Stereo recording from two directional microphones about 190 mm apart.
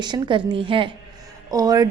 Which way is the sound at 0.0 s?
25° right (ahead or behind).